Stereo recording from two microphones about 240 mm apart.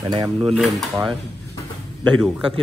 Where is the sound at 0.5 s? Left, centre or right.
Centre.